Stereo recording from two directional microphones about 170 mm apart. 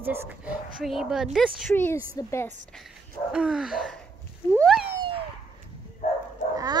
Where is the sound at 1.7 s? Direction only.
15° left (ahead or behind).